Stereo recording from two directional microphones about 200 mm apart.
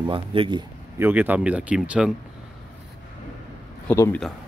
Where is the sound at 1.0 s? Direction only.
10° right (ahead or behind).